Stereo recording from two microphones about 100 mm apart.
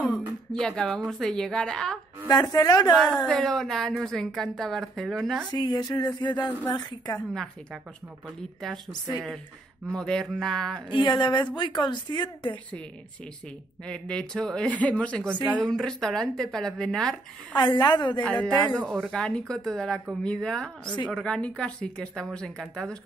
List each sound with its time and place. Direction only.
0.5 s speech: 10° left (ahead or behind)
2.2 s a woman's voice: 40° left (ahead or behind)
3.3 s a woman's voice: 5° left (ahead or behind)
5.5 s a woman's voice: 45° left (ahead or behind)
8.4 s a woman's voice: 5° left (ahead or behind)
9.9 s a woman's voice: 5° left (ahead or behind)
10.9 s a woman's voice: 50° left (ahead or behind)
13.8 s speech: 10° left (ahead or behind)
17.6 s a woman's voice: 50° left (ahead or behind)
18.2 s speech: 15° left (ahead or behind)